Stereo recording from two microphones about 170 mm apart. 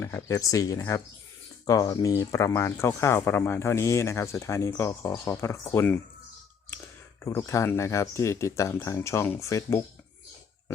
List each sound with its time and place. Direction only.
0.0 s speech: 15° left (ahead or behind)
7.3 s speech: 15° left (ahead or behind)